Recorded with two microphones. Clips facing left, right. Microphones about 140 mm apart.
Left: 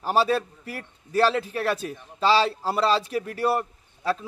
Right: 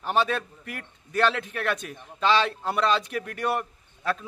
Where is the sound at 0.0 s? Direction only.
35° left (ahead or behind).